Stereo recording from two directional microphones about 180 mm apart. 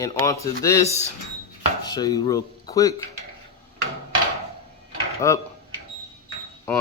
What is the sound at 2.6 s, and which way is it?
Mechanisms, 20° left (ahead or behind).